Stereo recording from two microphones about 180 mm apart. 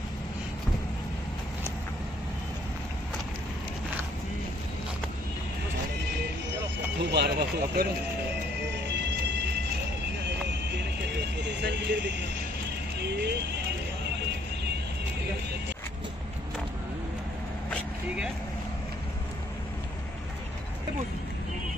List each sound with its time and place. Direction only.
7.1 s speech: 65° right (ahead or behind)
8.9 s vehicle: 70° right (ahead or behind)
11.4 s vehicle: 75° right (ahead or behind)
13.0 s speech: 65° right (ahead or behind)